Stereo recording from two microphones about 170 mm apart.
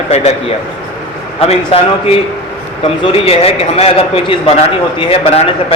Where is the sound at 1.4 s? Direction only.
35° left (ahead or behind).